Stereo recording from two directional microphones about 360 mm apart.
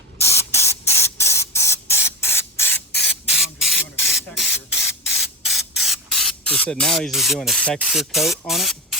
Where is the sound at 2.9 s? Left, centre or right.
Left.